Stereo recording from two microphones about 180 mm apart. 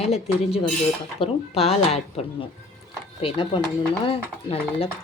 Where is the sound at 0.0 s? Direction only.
35° left (ahead or behind).